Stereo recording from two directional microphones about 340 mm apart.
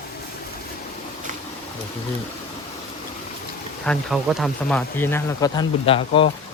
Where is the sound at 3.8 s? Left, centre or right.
Centre.